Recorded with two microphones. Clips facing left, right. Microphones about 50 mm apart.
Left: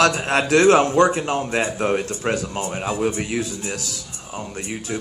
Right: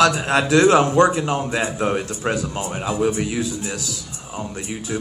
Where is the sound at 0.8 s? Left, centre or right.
Right.